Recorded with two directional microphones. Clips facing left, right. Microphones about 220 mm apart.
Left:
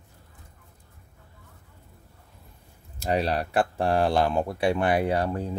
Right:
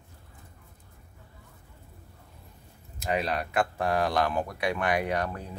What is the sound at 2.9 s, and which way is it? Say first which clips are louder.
Speech: left 4 dB; 35° left (ahead or behind).